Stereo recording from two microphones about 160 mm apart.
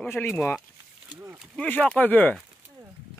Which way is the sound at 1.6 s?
10° left (ahead or behind).